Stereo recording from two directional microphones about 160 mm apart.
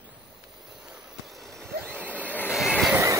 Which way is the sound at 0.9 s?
Centre (ahead or behind).